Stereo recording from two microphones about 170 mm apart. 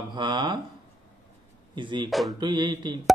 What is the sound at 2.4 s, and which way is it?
Speech, 25° right (ahead or behind).